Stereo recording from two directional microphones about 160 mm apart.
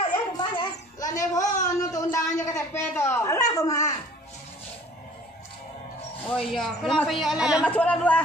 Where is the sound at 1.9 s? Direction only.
20° left (ahead or behind).